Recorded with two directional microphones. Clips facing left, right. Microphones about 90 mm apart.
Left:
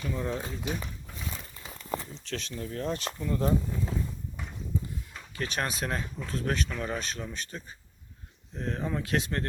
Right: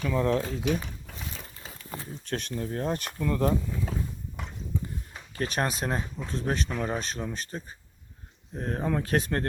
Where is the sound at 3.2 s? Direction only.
60° right (ahead or behind).